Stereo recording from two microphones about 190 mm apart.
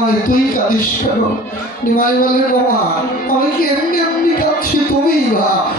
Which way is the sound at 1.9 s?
50° left (ahead or behind).